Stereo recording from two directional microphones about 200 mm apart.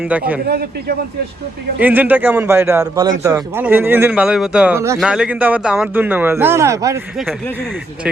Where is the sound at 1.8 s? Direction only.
10° right (ahead or behind).